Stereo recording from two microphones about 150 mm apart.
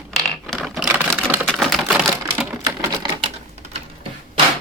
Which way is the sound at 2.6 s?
30° right (ahead or behind).